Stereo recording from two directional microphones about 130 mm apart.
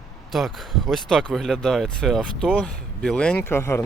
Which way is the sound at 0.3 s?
Centre (ahead or behind).